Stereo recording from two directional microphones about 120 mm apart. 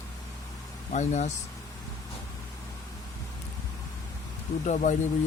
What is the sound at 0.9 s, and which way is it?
Speech, 80° left.